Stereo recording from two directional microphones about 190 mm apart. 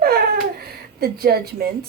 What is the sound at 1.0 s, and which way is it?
Speech, 55° right (ahead or behind).